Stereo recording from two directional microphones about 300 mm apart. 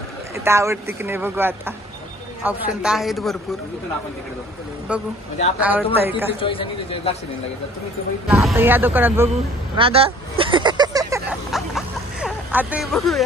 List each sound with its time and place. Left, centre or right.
0.4 s speech: centre
5.6 s speech: centre
6.4 s a man's voice: centre
8.3 s speech: centre
9.8 s a sound: centre